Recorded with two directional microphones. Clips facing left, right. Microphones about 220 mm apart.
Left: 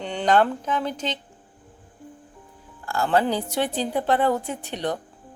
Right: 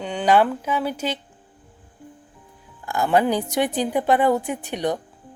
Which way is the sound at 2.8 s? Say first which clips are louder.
Right 2 dB; 15° right (ahead or behind).